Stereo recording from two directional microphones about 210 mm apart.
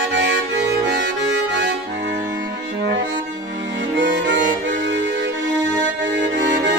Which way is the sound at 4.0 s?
55° right (ahead or behind).